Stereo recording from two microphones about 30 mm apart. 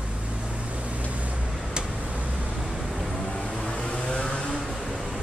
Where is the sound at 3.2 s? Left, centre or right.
Left.